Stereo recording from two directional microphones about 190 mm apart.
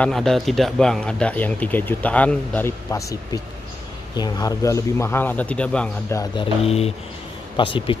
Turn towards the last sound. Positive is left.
turn(degrees=25)  # may be behind; listen again after turning